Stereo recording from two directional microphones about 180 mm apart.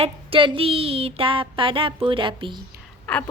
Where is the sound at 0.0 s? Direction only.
30° right (ahead or behind).